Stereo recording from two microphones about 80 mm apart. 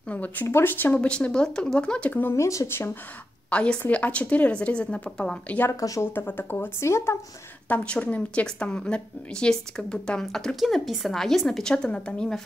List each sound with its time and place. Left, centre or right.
0.1 s speech: left
1.0 s a woman's voice: centre
2.3 s speech: left
3.4 s a woman's voice: centre
5.7 s speech: left
6.1 s speech: left
7.6 s a woman's voice: centre